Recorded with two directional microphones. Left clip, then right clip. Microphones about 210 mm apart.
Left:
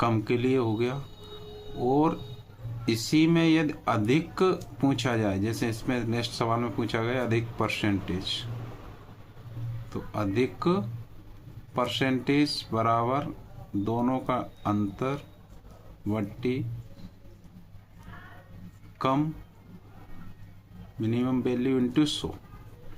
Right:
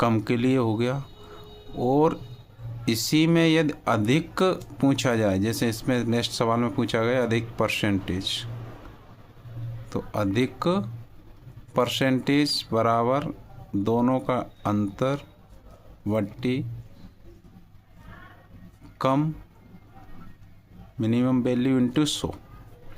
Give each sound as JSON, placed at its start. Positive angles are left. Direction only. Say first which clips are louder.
{"t": 0.0, "sound": "speech", "louder": "right 3 dB", "side_deg": -55}
{"t": 9.9, "sound": "speech", "louder": "right 4 dB", "side_deg": -55}
{"t": 18.9, "sound": "speech", "louder": "right 3 dB", "side_deg": -55}
{"t": 21.0, "sound": "speech", "louder": "right 4 dB", "side_deg": -55}